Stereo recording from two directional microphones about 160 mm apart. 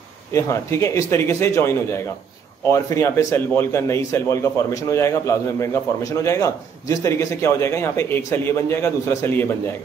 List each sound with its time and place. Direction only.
0.3 s a man's voice: 20° left (ahead or behind)